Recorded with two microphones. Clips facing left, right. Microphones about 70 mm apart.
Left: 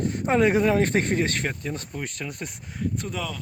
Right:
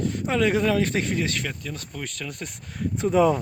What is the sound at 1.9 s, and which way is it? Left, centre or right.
Speech, left.